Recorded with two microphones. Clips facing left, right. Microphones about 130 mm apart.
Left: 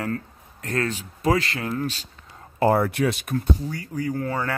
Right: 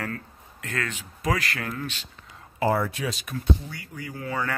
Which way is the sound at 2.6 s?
60° left (ahead or behind).